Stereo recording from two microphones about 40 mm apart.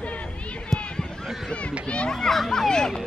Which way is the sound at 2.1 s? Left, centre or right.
Centre.